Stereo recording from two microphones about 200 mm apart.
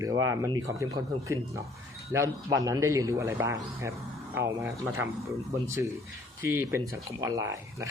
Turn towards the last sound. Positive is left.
turn(degrees=-15)  # may be behind; listen again after turning